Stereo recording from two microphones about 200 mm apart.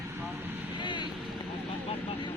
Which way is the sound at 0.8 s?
25° left (ahead or behind).